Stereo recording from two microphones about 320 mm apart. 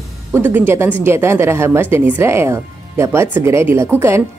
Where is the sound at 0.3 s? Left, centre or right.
Centre.